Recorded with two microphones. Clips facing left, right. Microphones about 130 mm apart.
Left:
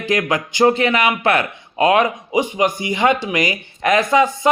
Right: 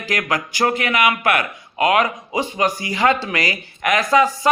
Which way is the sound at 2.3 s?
15° left (ahead or behind).